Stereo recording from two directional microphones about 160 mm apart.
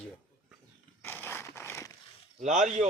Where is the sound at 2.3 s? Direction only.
50° right (ahead or behind).